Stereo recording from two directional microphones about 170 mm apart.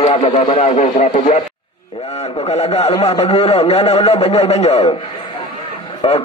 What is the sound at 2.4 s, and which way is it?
Speech, 35° left (ahead or behind).